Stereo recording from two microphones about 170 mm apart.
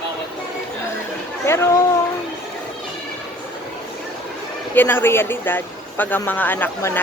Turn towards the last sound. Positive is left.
turn(degrees=10)  # may be behind; listen again after turning